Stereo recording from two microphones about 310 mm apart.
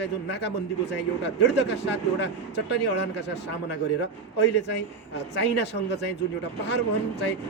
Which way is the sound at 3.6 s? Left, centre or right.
Left.